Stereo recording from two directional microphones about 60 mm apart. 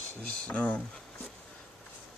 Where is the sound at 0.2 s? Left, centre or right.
Left.